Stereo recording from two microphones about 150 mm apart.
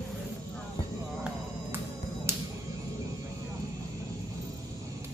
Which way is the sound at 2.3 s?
15° right (ahead or behind).